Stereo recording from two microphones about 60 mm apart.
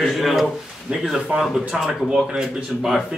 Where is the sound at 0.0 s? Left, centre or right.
Centre.